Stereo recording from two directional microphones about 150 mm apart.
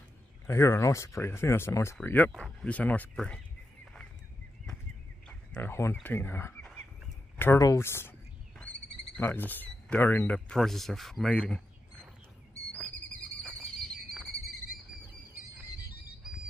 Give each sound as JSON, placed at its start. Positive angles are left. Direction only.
{"t": 0.5, "sound": "speech", "side_deg": 20}
{"t": 5.5, "sound": "speech", "side_deg": 15}
{"t": 16.2, "sound": "squawk", "side_deg": 0}